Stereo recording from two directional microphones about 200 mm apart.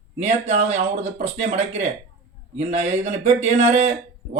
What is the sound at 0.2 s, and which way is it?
Speech, 35° right (ahead or behind).